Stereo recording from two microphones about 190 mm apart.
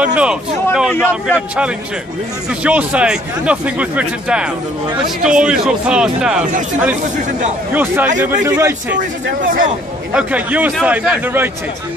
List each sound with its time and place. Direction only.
0.0 s a man's voice: 5° right (ahead or behind)
7.7 s speech: 10° right (ahead or behind)
9.4 s speech: 45° right (ahead or behind)
10.1 s speech: 5° right (ahead or behind)